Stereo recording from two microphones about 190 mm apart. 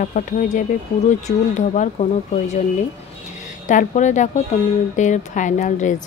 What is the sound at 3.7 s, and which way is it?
A woman's voice, 40° left (ahead or behind).